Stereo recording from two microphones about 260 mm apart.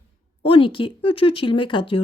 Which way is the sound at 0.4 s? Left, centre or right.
Centre.